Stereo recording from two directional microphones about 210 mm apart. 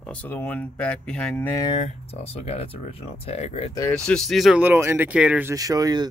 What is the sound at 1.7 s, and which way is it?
Speech, 30° left (ahead or behind).